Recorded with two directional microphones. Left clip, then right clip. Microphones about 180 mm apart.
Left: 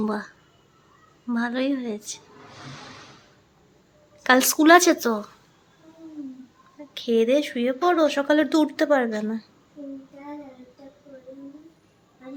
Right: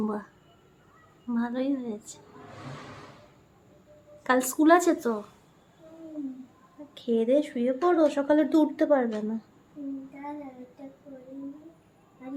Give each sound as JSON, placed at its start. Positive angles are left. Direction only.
{"t": 0.0, "sound": "speech", "side_deg": 10}
{"t": 1.3, "sound": "speech", "side_deg": 15}
{"t": 4.2, "sound": "speech", "side_deg": 15}
{"t": 6.9, "sound": "speech", "side_deg": 10}